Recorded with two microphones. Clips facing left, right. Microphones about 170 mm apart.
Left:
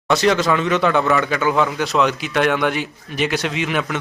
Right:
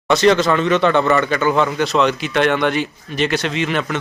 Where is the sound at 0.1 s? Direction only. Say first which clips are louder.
Right 3 dB; 10° left (ahead or behind).